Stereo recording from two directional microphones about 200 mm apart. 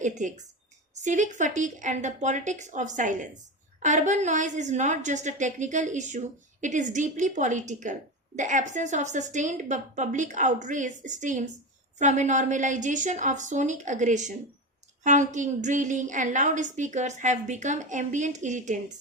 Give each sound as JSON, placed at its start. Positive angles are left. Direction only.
{"t": 0.0, "sound": "a woman's voice", "side_deg": -40}